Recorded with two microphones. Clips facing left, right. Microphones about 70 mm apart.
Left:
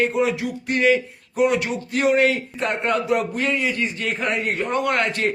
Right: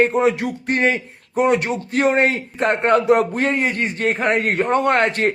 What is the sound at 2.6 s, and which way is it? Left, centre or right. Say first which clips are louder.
A man's voice: right 8 dB; right.